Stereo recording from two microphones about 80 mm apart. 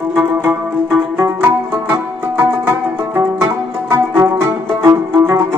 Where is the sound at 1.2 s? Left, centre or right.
Right.